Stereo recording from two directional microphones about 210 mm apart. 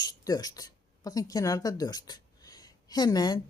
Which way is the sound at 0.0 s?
20° left (ahead or behind).